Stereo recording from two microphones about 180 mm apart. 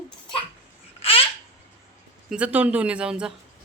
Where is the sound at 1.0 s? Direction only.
30° left (ahead or behind).